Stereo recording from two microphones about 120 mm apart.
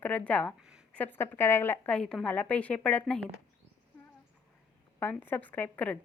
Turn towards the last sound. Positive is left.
turn(degrees=15)  # may be behind; listen again after turning